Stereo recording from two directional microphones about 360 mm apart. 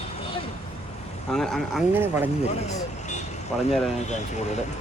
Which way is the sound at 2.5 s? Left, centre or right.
Centre.